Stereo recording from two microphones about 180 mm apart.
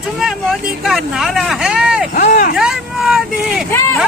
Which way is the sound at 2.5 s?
Centre (ahead or behind).